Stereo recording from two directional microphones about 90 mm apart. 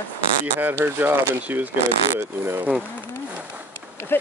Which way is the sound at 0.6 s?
25° right (ahead or behind).